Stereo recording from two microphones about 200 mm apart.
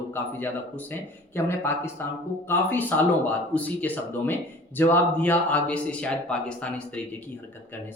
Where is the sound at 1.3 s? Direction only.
10° left (ahead or behind).